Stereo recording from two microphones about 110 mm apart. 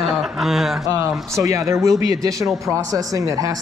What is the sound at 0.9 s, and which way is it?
Speech, 30° right (ahead or behind).